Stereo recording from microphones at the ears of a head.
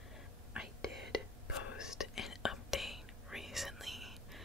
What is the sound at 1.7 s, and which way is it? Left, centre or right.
Whispering, left.